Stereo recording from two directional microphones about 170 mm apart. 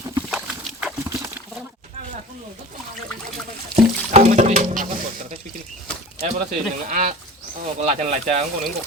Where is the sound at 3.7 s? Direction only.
40° right (ahead or behind).